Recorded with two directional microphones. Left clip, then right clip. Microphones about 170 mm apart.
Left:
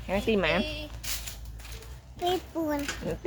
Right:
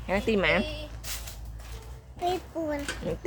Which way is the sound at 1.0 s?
5° left (ahead or behind).